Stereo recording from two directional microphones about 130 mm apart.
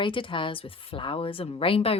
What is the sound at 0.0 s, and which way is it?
A woman's voice, 40° left (ahead or behind).